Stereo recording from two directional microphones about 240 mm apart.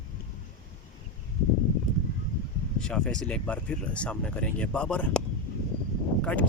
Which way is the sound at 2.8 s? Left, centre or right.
Centre.